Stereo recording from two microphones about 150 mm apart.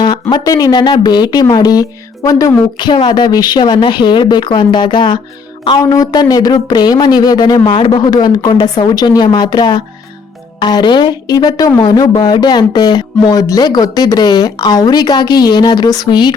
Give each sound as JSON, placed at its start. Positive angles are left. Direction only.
{"t": 0.0, "sound": "speech", "side_deg": 30}